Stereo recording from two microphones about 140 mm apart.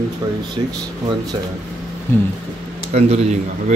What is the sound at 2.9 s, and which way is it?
Speech, 50° right (ahead or behind).